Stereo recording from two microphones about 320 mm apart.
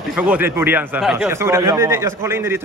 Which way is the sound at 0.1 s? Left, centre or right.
Centre.